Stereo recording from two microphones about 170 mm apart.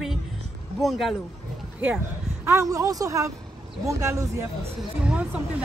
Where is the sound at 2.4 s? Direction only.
15° right (ahead or behind).